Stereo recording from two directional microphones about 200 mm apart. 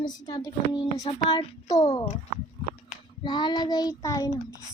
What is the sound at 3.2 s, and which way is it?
Child singing, 20° left (ahead or behind).